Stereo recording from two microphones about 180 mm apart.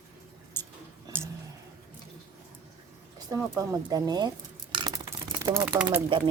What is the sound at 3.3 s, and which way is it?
Speech, 20° right (ahead or behind).